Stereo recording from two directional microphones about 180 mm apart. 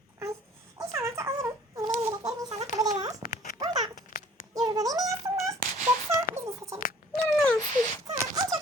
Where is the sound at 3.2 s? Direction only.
55° left (ahead or behind).